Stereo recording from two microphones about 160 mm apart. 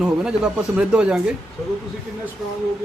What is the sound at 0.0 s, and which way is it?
Speech, 5° right (ahead or behind).